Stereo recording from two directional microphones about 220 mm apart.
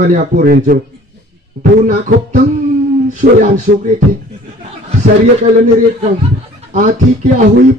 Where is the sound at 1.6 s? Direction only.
35° right (ahead or behind).